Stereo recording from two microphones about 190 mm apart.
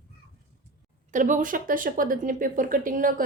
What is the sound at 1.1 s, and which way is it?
Speech, 40° right (ahead or behind).